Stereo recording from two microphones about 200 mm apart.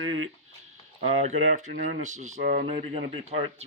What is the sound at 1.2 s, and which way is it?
A man's voice, 35° right (ahead or behind).